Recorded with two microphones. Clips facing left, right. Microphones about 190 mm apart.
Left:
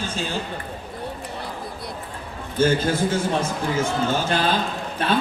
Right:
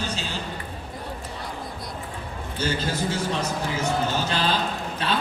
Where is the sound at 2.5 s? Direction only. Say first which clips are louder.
Left 8 dB; 50° left (ahead or behind).